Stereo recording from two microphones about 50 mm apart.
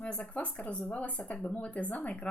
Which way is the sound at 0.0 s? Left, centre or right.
Left.